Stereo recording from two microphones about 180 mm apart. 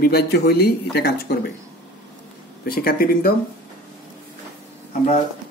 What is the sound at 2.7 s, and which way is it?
Speech, 55° left (ahead or behind).